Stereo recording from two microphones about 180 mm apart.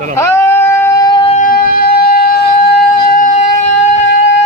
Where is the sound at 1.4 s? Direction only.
55° left (ahead or behind).